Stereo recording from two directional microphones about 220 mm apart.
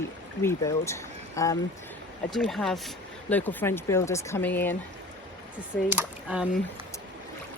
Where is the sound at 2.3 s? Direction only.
Centre (ahead or behind).